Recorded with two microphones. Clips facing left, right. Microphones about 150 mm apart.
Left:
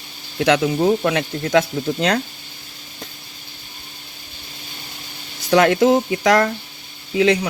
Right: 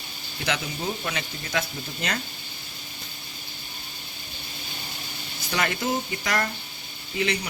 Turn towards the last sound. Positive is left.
turn(degrees=90)